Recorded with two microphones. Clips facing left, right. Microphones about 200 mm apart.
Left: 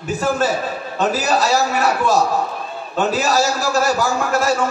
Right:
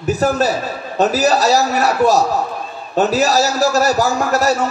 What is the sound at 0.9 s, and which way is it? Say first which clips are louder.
A man's voice: right 4 dB; 40° right (ahead or behind).